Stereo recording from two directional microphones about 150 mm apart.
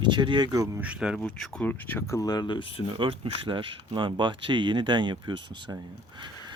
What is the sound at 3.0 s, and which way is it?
Speech, 35° right (ahead or behind).